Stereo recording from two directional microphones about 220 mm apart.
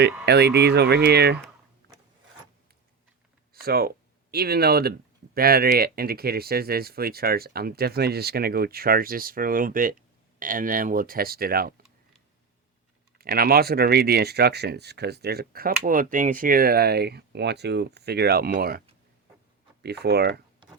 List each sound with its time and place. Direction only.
0.3 s speech: 50° right (ahead or behind)
3.5 s speech: 45° right (ahead or behind)
13.1 s speech: 45° right (ahead or behind)
19.8 s speech: 45° right (ahead or behind)